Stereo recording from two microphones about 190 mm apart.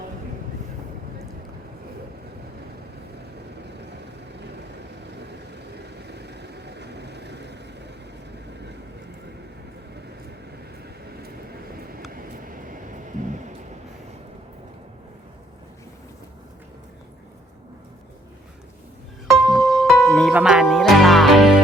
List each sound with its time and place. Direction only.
6.0 s vehicle: 60° right (ahead or behind)
12.1 s vehicle: 45° right (ahead or behind)
19.3 s music: centre (ahead or behind)